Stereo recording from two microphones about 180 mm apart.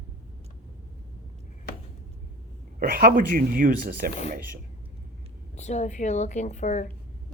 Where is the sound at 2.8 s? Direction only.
55° right (ahead or behind).